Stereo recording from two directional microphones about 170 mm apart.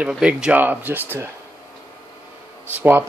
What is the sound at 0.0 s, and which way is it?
Speech, 5° right (ahead or behind).